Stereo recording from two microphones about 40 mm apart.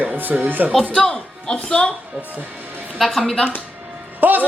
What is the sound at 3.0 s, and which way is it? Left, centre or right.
Speech, centre.